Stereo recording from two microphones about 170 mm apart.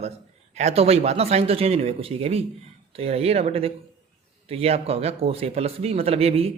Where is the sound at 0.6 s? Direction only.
35° right (ahead or behind).